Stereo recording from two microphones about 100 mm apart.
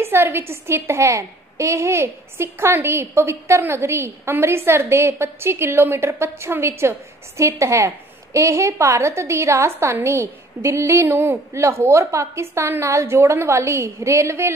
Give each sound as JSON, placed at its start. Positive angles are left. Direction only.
{"t": 0.0, "sound": "a woman's voice", "side_deg": -25}